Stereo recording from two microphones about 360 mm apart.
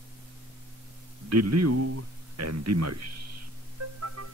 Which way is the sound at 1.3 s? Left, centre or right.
Right.